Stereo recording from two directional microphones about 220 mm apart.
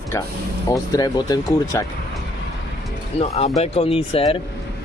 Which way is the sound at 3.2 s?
30° left (ahead or behind).